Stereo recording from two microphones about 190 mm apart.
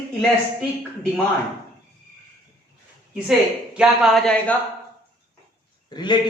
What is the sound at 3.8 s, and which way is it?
Speech, centre (ahead or behind).